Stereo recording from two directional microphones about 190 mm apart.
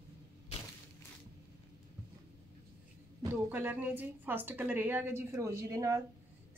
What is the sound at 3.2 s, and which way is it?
A woman's voice, 10° right (ahead or behind).